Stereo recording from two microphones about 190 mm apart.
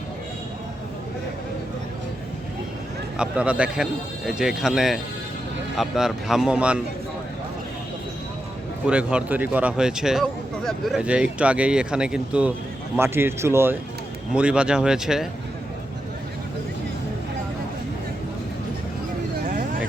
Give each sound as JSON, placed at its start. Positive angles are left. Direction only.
{"t": 3.2, "sound": "speech", "side_deg": -5}
{"t": 8.9, "sound": "speech", "side_deg": -5}
{"t": 19.5, "sound": "a sound", "side_deg": -45}